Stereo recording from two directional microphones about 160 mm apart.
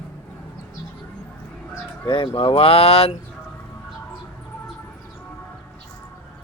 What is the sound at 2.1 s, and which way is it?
Speech, 35° left (ahead or behind).